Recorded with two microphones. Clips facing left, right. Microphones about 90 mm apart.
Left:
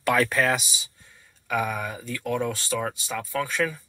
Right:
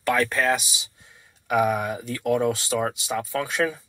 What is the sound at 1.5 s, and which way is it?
Speech, 15° right (ahead or behind).